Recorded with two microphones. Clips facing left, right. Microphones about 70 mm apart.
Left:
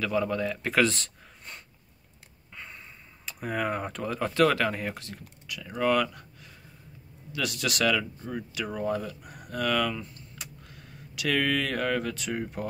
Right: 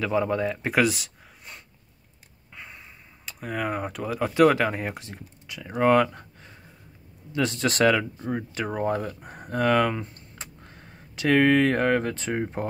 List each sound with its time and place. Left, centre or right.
0.0 s speech: right